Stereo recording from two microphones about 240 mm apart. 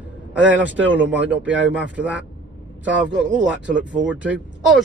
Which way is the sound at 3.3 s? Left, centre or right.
Centre.